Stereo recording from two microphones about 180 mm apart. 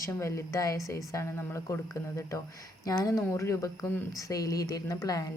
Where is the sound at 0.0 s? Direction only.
15° left (ahead or behind).